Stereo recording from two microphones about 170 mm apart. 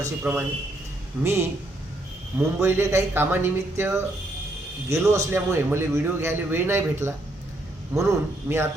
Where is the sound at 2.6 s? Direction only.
15° right (ahead or behind).